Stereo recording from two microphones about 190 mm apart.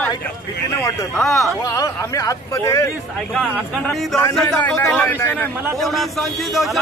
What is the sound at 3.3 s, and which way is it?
A man's voice, centre (ahead or behind).